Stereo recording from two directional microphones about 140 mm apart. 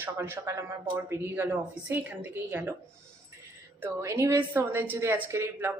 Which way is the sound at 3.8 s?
20° right (ahead or behind).